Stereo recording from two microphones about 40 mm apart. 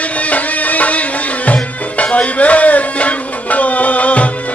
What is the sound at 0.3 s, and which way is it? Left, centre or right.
Music, left.